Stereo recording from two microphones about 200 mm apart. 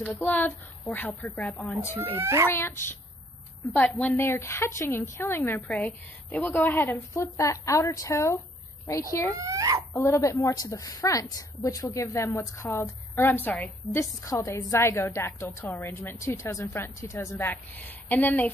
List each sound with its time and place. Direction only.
0.0 s a woman's voice: 10° left (ahead or behind)
2.1 s speech: 10° right (ahead or behind)
2.5 s a woman's voice: 10° left (ahead or behind)
9.4 s speech: 15° right (ahead or behind)
9.9 s a woman's voice: 15° left (ahead or behind)